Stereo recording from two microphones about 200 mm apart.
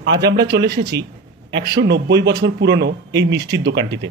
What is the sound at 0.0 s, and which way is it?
Speech, 60° right (ahead or behind).